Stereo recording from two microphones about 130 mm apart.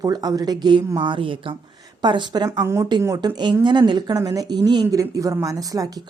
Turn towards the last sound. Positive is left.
turn(degrees=-30)  # may be behind; listen again after turning